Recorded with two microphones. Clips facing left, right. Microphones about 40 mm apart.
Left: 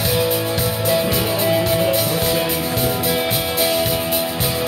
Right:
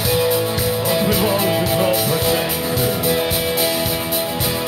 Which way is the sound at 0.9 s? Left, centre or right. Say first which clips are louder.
Right 1 dB; centre.